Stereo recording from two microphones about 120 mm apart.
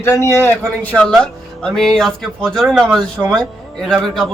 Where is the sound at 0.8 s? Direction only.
5° left (ahead or behind).